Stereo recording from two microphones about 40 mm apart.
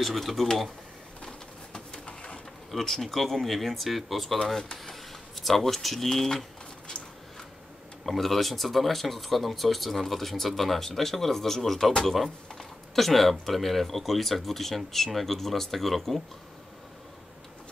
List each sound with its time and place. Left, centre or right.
0.0 s speech: centre
1.2 s pigeon: left
2.7 s speech: centre
8.0 s speech: centre